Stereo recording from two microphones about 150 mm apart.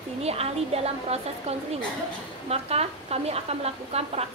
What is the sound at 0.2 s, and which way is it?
A woman's voice, 45° right (ahead or behind).